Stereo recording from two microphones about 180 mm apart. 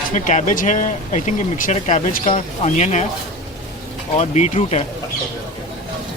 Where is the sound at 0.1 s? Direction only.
45° left (ahead or behind).